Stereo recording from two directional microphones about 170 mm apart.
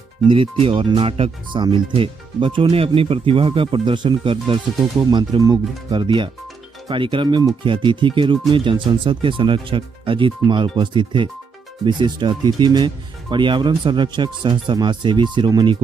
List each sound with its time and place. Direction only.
0.3 s speech: 30° right (ahead or behind)